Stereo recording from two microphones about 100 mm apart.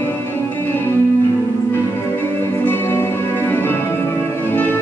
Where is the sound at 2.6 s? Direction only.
25° left (ahead or behind).